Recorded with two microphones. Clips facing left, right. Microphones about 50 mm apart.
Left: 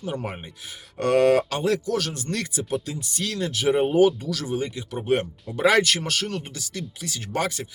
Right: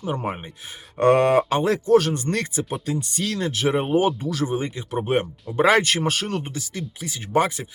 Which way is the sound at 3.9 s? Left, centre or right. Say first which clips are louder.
Left 1 dB; right.